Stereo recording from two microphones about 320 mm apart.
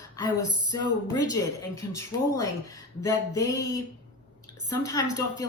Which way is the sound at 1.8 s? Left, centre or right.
Centre.